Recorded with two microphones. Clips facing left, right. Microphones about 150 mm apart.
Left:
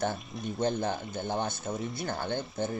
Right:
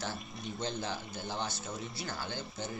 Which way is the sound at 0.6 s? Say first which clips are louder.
Left 8 dB; 50° left (ahead or behind).